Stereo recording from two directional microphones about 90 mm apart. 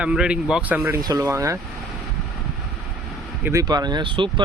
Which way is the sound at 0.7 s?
30° right (ahead or behind).